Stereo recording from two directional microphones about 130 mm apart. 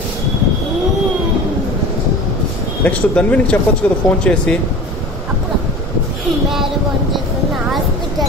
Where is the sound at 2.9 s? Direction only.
10° left (ahead or behind).